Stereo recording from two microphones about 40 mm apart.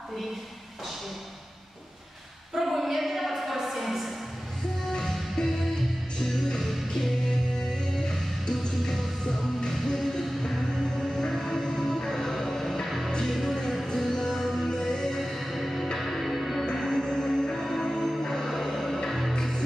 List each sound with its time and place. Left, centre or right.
2.5 s a sound: centre
5.0 s music: centre
13.9 s music: centre
14.7 s music: centre
15.1 s music: centre
16.8 s music: centre
18.4 s music: centre
19.3 s music: centre